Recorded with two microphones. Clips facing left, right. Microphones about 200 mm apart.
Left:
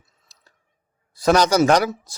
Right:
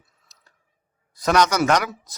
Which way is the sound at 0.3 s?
30° left (ahead or behind).